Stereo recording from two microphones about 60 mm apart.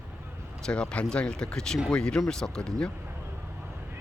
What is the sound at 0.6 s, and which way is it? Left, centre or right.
Speech, centre.